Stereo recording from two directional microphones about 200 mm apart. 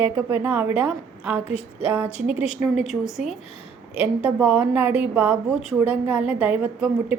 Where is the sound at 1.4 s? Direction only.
30° left (ahead or behind).